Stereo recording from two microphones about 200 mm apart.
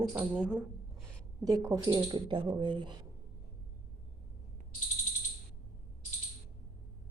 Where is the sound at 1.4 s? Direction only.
20° right (ahead or behind).